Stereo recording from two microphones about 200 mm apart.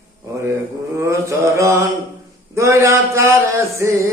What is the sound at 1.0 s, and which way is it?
Mantra, 15° right (ahead or behind).